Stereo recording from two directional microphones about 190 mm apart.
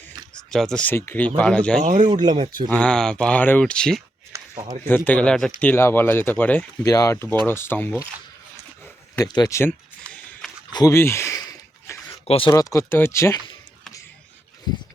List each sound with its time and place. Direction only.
0.5 s speech: centre (ahead or behind)
1.8 s speech: 40° right (ahead or behind)
2.0 s speech: 20° right (ahead or behind)
2.6 s speech: 5° left (ahead or behind)
4.3 s a sound: 20° right (ahead or behind)
4.9 s speech: 10° left (ahead or behind)
9.1 s a sound: 20° left (ahead or behind)
10.7 s a sound: 20° left (ahead or behind)
12.2 s speech: 30° left (ahead or behind)
12.5 s speech: 15° left (ahead or behind)